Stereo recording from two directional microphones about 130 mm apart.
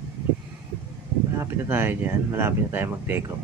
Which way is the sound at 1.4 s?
15° right (ahead or behind).